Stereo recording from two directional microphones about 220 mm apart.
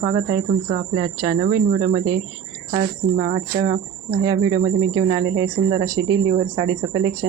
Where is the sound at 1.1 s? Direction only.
20° right (ahead or behind).